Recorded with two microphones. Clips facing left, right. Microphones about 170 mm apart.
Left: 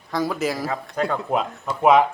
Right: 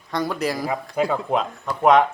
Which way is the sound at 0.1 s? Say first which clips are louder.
Even; centre (ahead or behind).